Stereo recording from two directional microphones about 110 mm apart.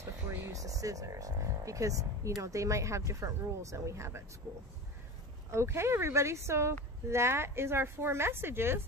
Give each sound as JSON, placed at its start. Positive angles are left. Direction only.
{"t": 0.0, "sound": "speech", "side_deg": -25}
{"t": 5.5, "sound": "speech", "side_deg": -25}